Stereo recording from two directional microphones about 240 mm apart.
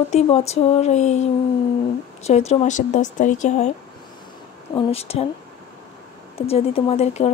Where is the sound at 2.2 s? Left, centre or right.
Left.